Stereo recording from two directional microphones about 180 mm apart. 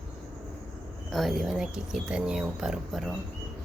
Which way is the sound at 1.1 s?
Centre (ahead or behind).